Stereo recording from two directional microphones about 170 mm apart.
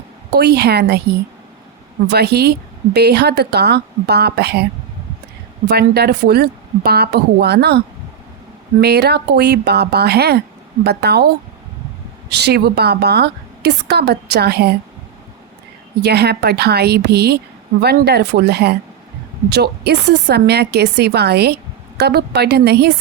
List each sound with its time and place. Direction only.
0.3 s a woman's voice: 70° right (ahead or behind)
2.0 s a woman's voice: 70° right (ahead or behind)
5.6 s a woman's voice: 70° right (ahead or behind)
8.8 s a woman's voice: 70° right (ahead or behind)
12.3 s a woman's voice: 75° right (ahead or behind)
16.0 s a woman's voice: 75° right (ahead or behind)